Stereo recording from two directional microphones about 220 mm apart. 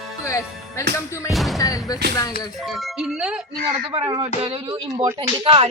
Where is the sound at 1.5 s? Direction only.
15° left (ahead or behind).